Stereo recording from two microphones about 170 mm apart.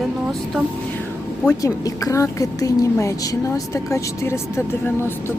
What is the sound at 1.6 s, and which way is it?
A woman's voice, 20° left (ahead or behind).